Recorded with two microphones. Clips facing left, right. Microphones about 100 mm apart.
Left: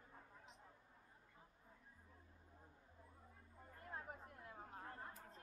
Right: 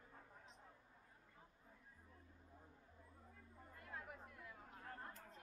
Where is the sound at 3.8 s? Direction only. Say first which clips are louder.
Left 2 dB; 35° left (ahead or behind).